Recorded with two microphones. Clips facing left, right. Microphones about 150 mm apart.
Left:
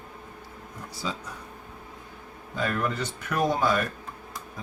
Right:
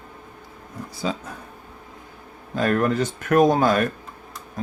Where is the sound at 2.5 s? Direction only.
50° right (ahead or behind).